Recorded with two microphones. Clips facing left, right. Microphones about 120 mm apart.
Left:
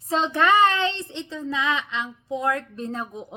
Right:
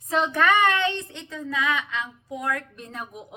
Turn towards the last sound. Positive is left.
turn(degrees=25)  # may be behind; listen again after turning